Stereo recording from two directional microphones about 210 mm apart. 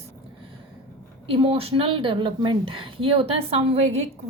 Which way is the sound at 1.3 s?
25° right (ahead or behind).